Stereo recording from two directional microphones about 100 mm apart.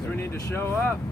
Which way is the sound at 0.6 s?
20° left (ahead or behind).